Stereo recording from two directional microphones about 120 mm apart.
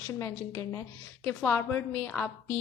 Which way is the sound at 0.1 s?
25° left (ahead or behind).